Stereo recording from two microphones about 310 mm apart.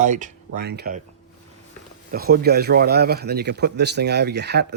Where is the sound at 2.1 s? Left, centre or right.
Right.